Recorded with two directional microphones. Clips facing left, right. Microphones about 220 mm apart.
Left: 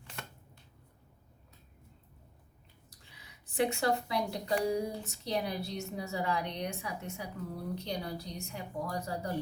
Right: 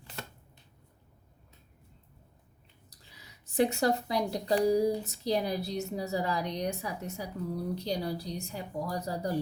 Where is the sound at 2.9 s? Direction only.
35° right (ahead or behind).